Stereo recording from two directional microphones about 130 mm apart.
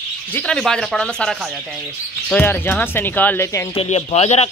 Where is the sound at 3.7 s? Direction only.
50° left (ahead or behind).